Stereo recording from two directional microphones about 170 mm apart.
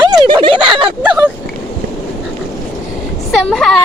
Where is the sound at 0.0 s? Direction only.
25° right (ahead or behind).